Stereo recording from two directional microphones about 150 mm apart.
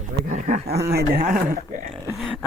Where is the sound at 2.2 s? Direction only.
5° right (ahead or behind).